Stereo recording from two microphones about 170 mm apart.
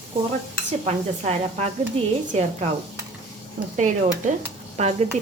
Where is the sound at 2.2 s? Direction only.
40° right (ahead or behind).